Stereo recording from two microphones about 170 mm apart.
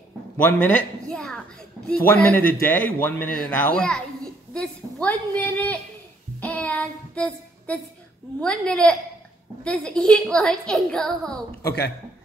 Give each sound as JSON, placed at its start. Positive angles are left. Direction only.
{"t": 0.4, "sound": "speech", "side_deg": 10}
{"t": 6.4, "sound": "child singing", "side_deg": 10}
{"t": 8.4, "sound": "a woman's voice", "side_deg": 5}
{"t": 11.6, "sound": "speech", "side_deg": 90}